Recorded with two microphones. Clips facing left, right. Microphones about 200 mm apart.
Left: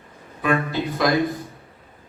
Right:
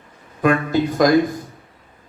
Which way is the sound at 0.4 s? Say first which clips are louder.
Right 5 dB; 45° right (ahead or behind).